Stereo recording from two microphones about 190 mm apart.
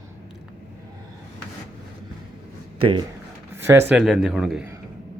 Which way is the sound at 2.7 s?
25° right (ahead or behind).